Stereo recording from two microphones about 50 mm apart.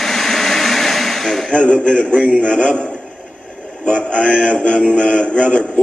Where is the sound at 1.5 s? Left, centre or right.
Left.